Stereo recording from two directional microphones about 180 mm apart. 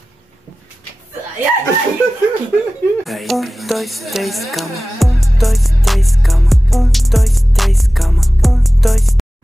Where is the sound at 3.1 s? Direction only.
Centre (ahead or behind).